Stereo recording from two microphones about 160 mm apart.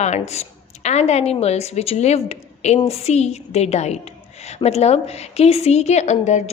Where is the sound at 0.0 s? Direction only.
45° left (ahead or behind).